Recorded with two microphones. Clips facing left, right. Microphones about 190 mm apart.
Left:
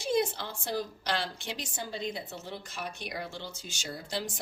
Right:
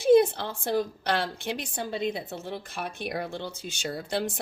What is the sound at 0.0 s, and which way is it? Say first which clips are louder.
A woman's voice: right 10 dB; 55° right (ahead or behind).